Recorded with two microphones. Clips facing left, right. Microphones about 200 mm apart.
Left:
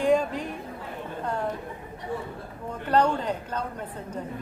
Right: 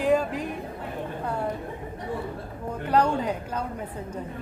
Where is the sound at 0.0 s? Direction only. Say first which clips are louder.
Even; 5° right (ahead or behind).